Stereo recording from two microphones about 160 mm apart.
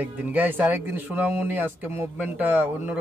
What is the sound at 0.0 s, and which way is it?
Speech, 10° right (ahead or behind).